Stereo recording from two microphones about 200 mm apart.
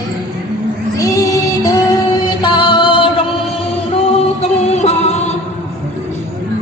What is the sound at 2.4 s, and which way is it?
Music, 25° left (ahead or behind).